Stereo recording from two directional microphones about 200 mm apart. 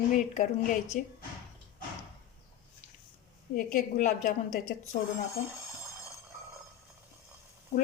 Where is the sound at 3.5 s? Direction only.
45° left (ahead or behind).